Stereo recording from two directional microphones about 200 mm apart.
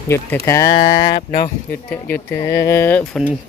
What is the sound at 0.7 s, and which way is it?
Speech, 35° left (ahead or behind).